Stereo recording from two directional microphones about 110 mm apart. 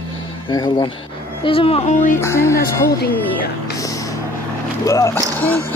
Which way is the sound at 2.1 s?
25° left (ahead or behind).